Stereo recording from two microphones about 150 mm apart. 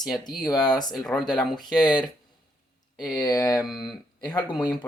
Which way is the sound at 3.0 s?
25° left (ahead or behind).